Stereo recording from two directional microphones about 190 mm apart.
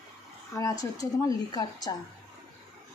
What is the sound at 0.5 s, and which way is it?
A woman's voice, 15° left (ahead or behind).